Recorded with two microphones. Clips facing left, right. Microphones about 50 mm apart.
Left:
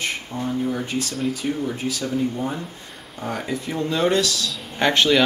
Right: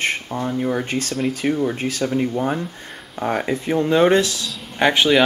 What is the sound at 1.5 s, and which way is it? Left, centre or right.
Speech, right.